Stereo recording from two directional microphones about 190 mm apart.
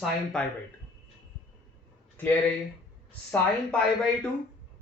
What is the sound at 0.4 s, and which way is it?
Speech, 5° left (ahead or behind).